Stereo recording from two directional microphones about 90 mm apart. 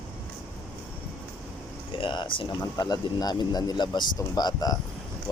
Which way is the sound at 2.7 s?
45° left (ahead or behind).